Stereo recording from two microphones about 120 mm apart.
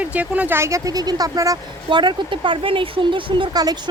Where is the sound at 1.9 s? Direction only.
40° right (ahead or behind).